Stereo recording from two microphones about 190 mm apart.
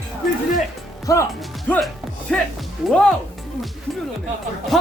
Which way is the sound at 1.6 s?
10° left (ahead or behind).